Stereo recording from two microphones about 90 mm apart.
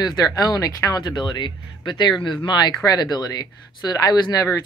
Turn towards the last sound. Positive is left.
turn(degrees=40)  # may be behind; listen again after turning